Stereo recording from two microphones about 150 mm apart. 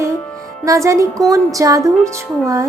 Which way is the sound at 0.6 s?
20° right (ahead or behind).